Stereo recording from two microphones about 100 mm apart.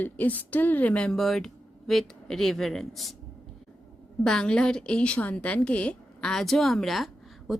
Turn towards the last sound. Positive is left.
turn(degrees=0)  # may be behind; listen again after turning